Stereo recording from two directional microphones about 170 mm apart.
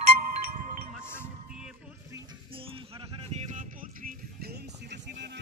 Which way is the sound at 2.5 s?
30° right (ahead or behind).